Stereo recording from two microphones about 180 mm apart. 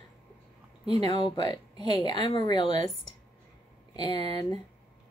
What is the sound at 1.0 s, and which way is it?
Speech, 25° left (ahead or behind).